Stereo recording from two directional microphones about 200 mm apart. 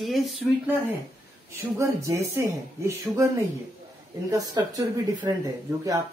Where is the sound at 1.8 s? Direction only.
15° right (ahead or behind).